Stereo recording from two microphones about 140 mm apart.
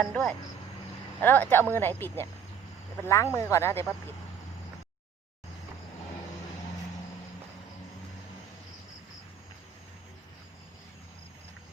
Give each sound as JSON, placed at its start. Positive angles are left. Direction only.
{"t": 0.0, "sound": "speech", "side_deg": 5}